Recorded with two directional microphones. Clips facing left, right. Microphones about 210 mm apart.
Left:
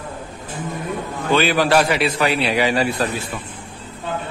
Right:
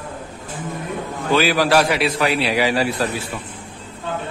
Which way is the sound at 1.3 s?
Centre (ahead or behind).